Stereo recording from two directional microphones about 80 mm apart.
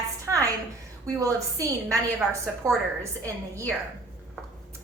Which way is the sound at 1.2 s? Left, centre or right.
Right.